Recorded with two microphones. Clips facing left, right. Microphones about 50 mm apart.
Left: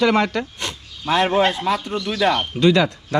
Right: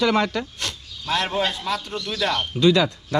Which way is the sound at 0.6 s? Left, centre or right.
Left.